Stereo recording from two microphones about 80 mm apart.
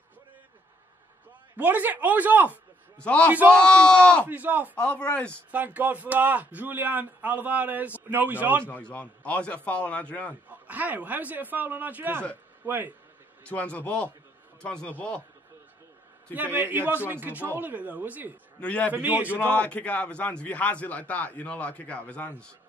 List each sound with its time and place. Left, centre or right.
1.6 s a man's voice: right
3.0 s a man's voice: centre
4.3 s a man's voice: right
4.7 s a man's voice: centre
5.5 s a man's voice: centre
8.6 s a man's voice: centre
10.5 s a man's voice: right
13.5 s a man's voice: centre
16.3 s a man's voice: right
18.6 s a man's voice: centre
18.9 s a man's voice: right
19.2 s a man's voice: left